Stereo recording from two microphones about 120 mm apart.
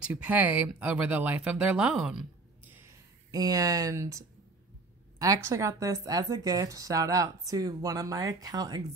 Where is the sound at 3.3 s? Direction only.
30° right (ahead or behind).